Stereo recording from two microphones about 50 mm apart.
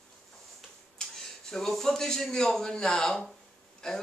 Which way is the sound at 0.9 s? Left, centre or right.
Centre.